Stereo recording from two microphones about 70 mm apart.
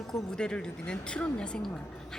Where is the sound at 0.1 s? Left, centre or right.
Centre.